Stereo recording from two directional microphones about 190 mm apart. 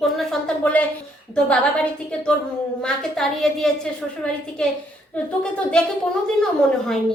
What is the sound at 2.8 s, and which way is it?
A woman's voice, centre (ahead or behind).